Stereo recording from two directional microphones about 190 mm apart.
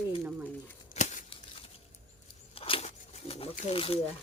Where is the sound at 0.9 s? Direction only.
40° left (ahead or behind).